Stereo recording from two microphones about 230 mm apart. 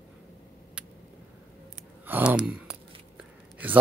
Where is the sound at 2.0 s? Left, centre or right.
Centre.